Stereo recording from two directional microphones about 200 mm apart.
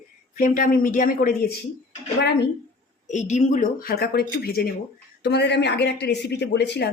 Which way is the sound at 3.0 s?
35° left (ahead or behind).